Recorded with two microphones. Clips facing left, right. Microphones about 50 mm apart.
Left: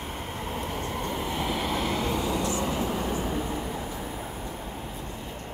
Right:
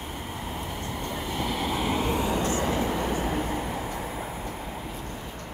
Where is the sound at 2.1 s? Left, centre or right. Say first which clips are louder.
Right 1 dB; right.